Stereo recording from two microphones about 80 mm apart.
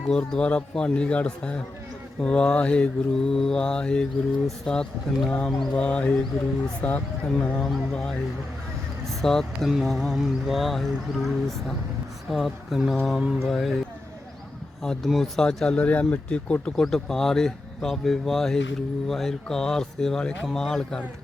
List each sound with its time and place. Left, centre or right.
0.1 s speech: centre
14.8 s speech: centre